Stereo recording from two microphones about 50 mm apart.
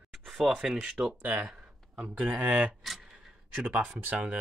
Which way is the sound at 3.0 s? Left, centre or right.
Centre.